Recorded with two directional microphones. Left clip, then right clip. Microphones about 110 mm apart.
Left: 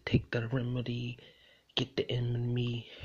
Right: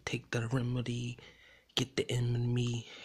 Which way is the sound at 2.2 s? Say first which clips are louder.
Even; 40° right (ahead or behind).